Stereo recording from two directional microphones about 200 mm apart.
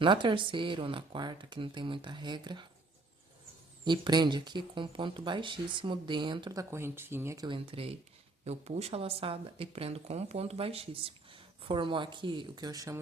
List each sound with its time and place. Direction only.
0.0 s speech: 25° right (ahead or behind)
3.8 s speech: 20° right (ahead or behind)